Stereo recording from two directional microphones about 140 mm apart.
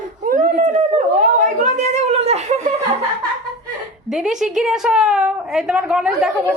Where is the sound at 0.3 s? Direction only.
65° right (ahead or behind); by 2.7 s 50° right (ahead or behind).